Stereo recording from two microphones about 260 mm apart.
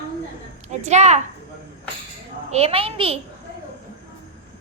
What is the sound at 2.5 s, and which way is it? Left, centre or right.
Speech, right.